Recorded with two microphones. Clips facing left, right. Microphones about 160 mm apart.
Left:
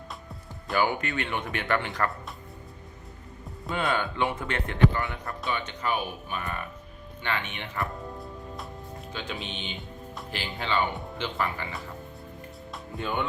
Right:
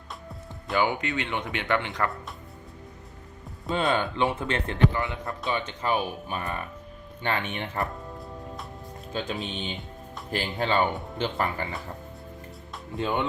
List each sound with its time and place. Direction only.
0.7 s speech: 20° right (ahead or behind)
3.7 s speech: 20° right (ahead or behind); by 7.9 s 40° right (ahead or behind)
9.1 s speech: 40° right (ahead or behind)
13.0 s speech: 25° right (ahead or behind)